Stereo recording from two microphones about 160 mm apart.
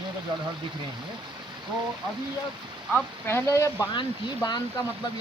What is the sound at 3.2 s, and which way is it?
Speech, 15° left (ahead or behind).